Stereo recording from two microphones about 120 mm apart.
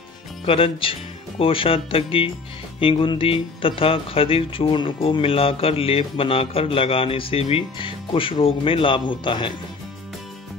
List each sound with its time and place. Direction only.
0.5 s speech: 50° left (ahead or behind)